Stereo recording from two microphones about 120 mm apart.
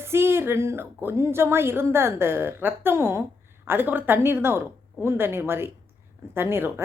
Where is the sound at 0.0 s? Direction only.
20° right (ahead or behind).